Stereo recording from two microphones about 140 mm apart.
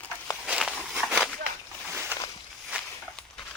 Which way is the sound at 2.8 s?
5° left (ahead or behind).